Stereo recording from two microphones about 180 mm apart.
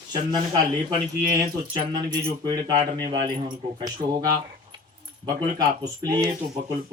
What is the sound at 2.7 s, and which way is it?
Speech, 55° right (ahead or behind).